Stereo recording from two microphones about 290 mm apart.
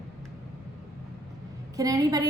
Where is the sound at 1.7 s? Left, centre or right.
Centre.